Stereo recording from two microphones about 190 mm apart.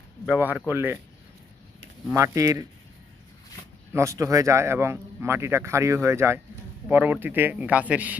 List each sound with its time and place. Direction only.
0.3 s speech: 5° right (ahead or behind)
2.1 s speech: 15° right (ahead or behind)
3.9 s speech: 15° right (ahead or behind)